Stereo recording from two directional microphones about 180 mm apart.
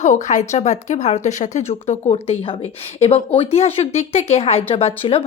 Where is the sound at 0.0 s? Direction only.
45° left (ahead or behind).